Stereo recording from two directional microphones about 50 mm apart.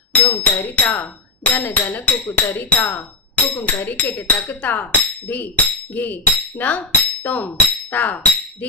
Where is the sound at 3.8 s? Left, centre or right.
Left.